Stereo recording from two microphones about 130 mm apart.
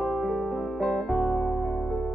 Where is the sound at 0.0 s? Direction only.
Centre (ahead or behind).